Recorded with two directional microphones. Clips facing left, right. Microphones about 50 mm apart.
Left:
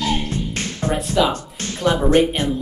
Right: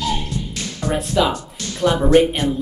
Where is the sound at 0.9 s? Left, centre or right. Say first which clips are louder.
Even; centre.